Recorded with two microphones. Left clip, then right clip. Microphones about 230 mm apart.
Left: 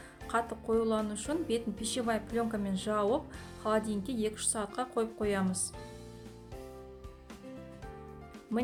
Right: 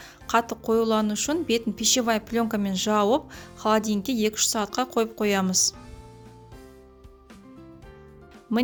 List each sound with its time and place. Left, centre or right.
0.3 s speech: right